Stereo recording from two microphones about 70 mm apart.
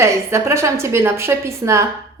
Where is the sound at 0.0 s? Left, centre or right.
Right.